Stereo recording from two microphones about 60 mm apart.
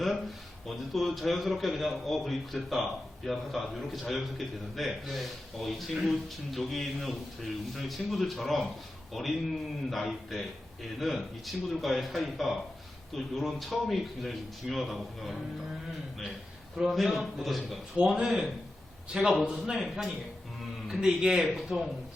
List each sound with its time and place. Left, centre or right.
0.9 s a man's voice: centre
16.7 s a man's voice: centre